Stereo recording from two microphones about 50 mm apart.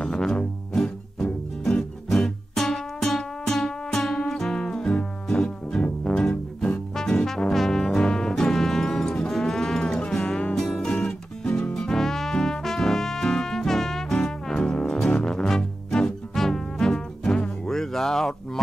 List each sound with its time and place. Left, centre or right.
0.0 s music: centre
7.0 s trombone: centre
9.4 s music: centre
11.4 s music: left
11.7 s music: centre